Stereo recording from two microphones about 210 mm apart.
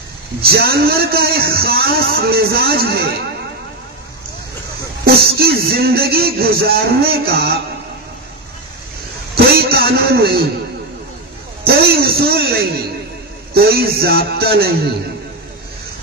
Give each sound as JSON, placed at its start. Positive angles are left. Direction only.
{"t": 0.4, "sound": "a man's voice", "side_deg": -50}
{"t": 5.0, "sound": "a man's voice", "side_deg": -45}
{"t": 9.3, "sound": "a sound", "side_deg": -45}
{"t": 11.6, "sound": "a man's voice", "side_deg": -45}
{"t": 13.5, "sound": "a man's voice", "side_deg": -50}